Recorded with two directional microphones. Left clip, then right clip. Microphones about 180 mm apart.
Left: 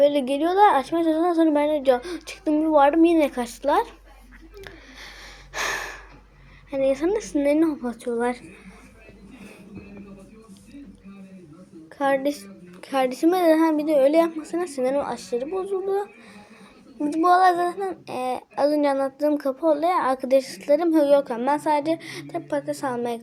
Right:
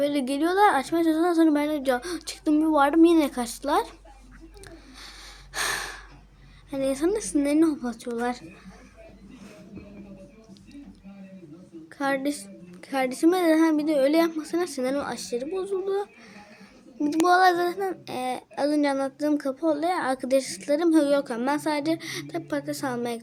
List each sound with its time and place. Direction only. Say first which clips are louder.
0.0 s child singing: left 6 dB; 25° right (ahead or behind)
4.6 s a sound: left 4 dB; 20° right (ahead or behind)
6.7 s child singing: left 4 dB; 25° right (ahead or behind)
11.9 s child singing: left 5 dB; 20° right (ahead or behind)